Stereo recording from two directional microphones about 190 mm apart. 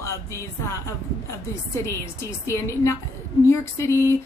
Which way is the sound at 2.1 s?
15° left (ahead or behind).